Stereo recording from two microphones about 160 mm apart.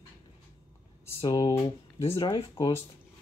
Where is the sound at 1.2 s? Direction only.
25° left (ahead or behind).